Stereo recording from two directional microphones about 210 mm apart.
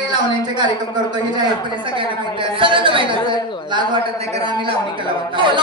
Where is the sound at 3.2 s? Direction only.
20° left (ahead or behind).